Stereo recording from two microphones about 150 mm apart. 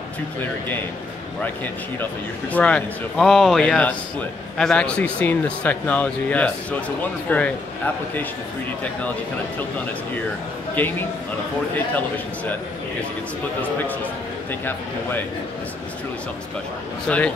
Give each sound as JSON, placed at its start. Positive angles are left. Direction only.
{"t": 1.4, "sound": "speech", "side_deg": 10}
{"t": 10.8, "sound": "speech", "side_deg": 10}
{"t": 14.5, "sound": "speech", "side_deg": 15}
{"t": 17.1, "sound": "speech", "side_deg": 10}